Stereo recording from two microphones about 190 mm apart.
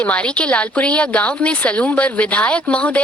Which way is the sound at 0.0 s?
5° left (ahead or behind).